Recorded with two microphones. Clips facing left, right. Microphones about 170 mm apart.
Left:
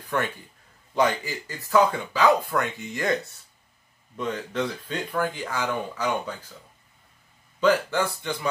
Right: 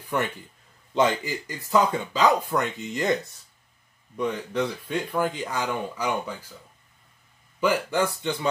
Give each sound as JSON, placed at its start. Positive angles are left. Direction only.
{"t": 0.9, "sound": "speech", "side_deg": -20}
{"t": 4.2, "sound": "speech", "side_deg": -10}
{"t": 7.6, "sound": "speech", "side_deg": -15}